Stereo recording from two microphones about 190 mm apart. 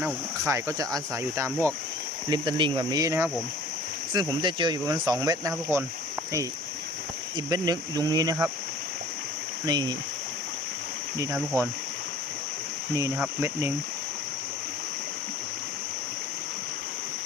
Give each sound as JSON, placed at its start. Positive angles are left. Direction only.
{"t": 0.0, "sound": "speech", "side_deg": -15}
{"t": 7.3, "sound": "speech", "side_deg": -20}
{"t": 9.6, "sound": "speech", "side_deg": -20}
{"t": 11.2, "sound": "speech", "side_deg": -15}
{"t": 13.1, "sound": "speech", "side_deg": -5}